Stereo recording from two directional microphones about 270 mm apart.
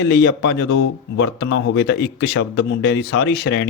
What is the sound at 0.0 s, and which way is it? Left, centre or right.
Speech, left.